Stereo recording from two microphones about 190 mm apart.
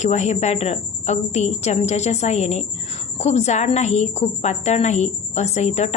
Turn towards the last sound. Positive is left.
turn(degrees=35)  # may be behind; listen again after turning